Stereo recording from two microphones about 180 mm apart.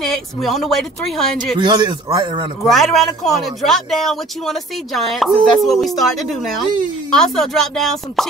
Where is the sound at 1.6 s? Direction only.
25° right (ahead or behind).